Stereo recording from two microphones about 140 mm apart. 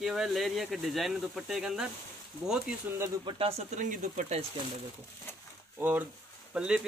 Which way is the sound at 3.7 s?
70° right (ahead or behind).